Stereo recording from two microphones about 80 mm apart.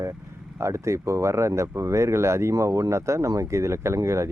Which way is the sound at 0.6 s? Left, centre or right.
Right.